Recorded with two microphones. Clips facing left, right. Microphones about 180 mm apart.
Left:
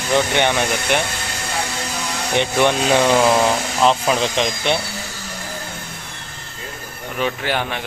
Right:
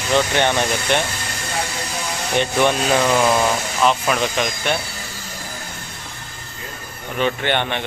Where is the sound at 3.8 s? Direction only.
25° left (ahead or behind).